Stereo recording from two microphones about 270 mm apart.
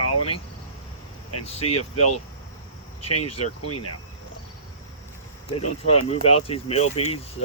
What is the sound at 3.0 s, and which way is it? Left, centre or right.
Speech, left.